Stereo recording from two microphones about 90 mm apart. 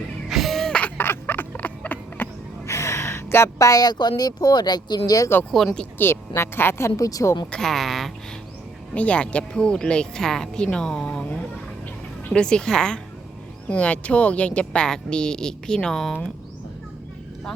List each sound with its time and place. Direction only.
0.3 s music: centre (ahead or behind)
0.8 s a sound: 20° left (ahead or behind); by 4.1 s 50° left (ahead or behind)
4.2 s speech: 45° left (ahead or behind)
5.5 s a woman's voice: 5° left (ahead or behind)
6.0 s a woman's voice: 25° left (ahead or behind)
7.5 s a woman's voice: 5° left (ahead or behind)
9.0 s speech: 15° left (ahead or behind)